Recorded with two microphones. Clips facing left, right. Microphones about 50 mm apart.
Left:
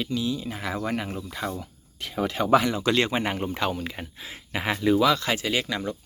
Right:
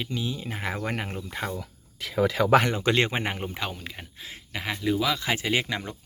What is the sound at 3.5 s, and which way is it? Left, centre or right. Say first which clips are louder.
Speech: left 6 dB; centre.